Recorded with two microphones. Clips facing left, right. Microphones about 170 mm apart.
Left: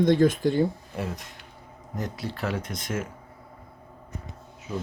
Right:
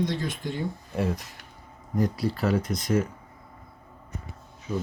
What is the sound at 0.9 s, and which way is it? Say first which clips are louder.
Speech: right 5 dB; centre (ahead or behind).